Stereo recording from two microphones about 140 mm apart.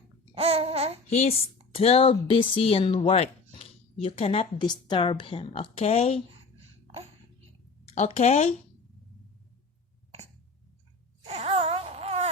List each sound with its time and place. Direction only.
0.3 s babbling: 45° right (ahead or behind)
1.1 s speech: 50° left (ahead or behind)
3.6 s a sound: 45° left (ahead or behind)
4.5 s a woman's voice: 30° left (ahead or behind); by 6.2 s 45° left (ahead or behind)
7.9 s speech: 50° left (ahead or behind)
11.3 s a sound: 45° right (ahead or behind)